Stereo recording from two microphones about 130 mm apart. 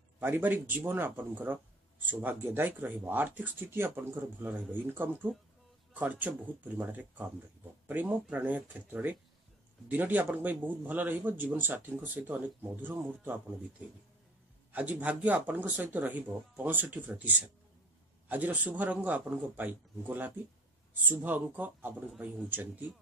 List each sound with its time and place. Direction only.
0.2 s speech: 15° right (ahead or behind)
18.3 s speech: 10° right (ahead or behind)